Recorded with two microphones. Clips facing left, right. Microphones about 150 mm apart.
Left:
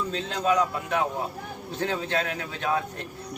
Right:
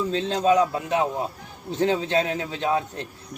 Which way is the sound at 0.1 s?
30° right (ahead or behind).